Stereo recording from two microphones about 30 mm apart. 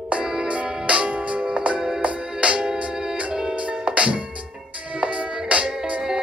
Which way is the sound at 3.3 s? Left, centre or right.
Right.